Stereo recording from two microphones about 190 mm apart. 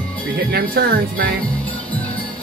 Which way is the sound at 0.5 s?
50° right (ahead or behind).